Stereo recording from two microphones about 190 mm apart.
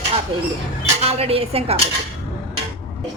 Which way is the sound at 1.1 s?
30° right (ahead or behind).